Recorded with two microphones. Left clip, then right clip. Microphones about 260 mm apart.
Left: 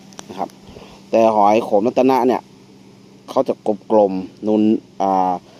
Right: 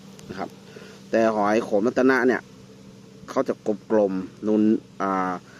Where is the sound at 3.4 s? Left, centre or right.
Left.